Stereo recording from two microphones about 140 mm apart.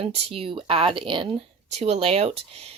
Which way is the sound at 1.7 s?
50° right (ahead or behind).